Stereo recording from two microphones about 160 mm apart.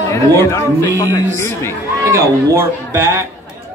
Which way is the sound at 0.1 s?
20° left (ahead or behind).